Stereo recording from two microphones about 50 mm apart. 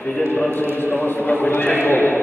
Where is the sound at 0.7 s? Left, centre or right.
Left.